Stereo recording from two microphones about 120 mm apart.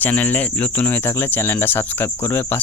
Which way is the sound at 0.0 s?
15° left (ahead or behind).